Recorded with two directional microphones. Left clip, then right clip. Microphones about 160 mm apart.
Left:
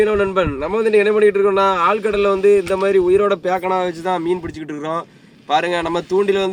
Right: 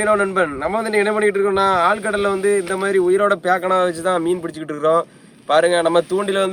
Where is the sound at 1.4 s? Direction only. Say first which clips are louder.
Left 2 dB; 20° right (ahead or behind).